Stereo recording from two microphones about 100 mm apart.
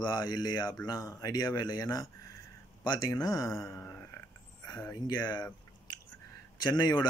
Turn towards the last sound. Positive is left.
turn(degrees=45)  # may be behind; listen again after turning